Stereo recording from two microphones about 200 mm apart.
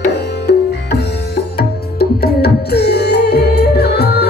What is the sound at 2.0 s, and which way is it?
Music, 55° left (ahead or behind).